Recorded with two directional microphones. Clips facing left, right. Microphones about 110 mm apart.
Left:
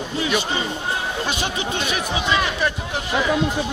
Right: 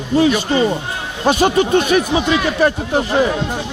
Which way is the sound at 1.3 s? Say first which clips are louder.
Right 18 dB; 45° right (ahead or behind).